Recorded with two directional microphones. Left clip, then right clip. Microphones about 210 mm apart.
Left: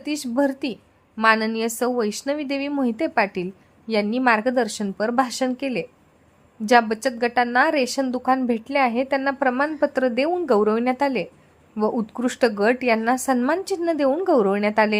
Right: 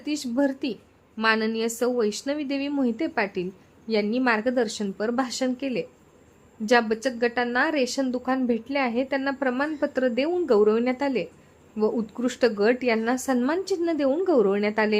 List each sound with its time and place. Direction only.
0.0 s a woman's voice: 15° left (ahead or behind)